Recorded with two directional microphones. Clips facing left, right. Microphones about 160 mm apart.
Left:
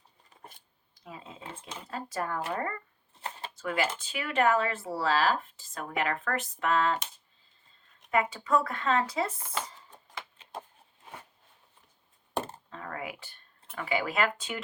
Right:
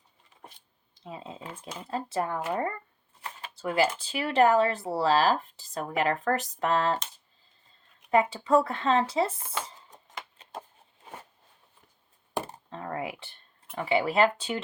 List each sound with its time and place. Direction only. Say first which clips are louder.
0.9 s speech: right 5 dB; 25° right (ahead or behind)
8.1 s speech: right 4 dB; 30° right (ahead or behind)
12.7 s typing: right 5 dB; 30° right (ahead or behind)
13.7 s speech: right 5 dB; 25° right (ahead or behind)